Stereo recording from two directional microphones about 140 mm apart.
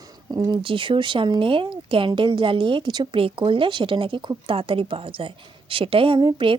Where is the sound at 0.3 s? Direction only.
30° right (ahead or behind).